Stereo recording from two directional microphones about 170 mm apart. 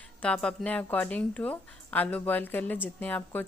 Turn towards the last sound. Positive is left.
turn(degrees=10)  # may be behind; listen again after turning